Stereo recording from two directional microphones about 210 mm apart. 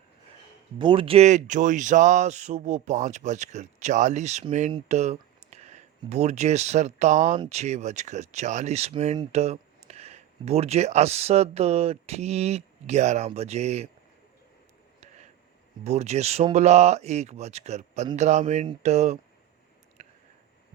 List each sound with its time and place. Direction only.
0.8 s speech: 25° right (ahead or behind)
15.8 s speech: 30° right (ahead or behind)
20.0 s a sound: 30° right (ahead or behind)